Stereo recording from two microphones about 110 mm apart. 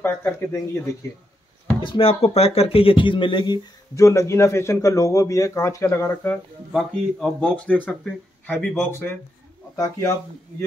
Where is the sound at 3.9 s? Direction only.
30° left (ahead or behind).